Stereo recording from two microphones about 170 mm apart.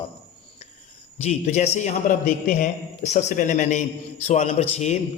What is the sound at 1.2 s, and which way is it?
A man's voice, 40° left (ahead or behind).